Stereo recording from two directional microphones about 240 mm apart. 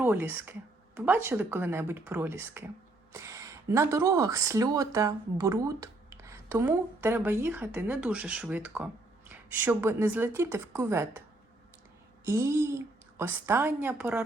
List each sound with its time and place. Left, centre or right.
0.0 s speech: centre
12.2 s speech: centre